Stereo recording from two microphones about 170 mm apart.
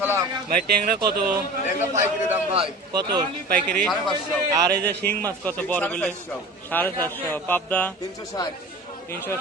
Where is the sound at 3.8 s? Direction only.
5° left (ahead or behind).